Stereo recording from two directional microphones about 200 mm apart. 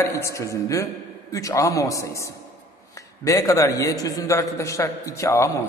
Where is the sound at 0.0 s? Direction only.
15° left (ahead or behind).